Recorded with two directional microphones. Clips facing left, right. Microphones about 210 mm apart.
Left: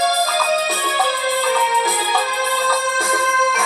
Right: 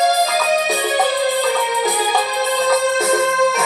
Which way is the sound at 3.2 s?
40° right (ahead or behind).